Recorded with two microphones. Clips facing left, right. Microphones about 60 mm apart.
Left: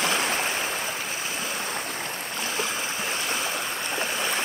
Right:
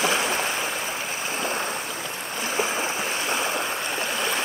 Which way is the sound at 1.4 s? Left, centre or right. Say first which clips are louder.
Right 4 dB; right.